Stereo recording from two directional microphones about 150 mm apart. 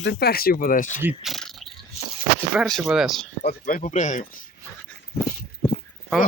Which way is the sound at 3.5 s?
65° left (ahead or behind).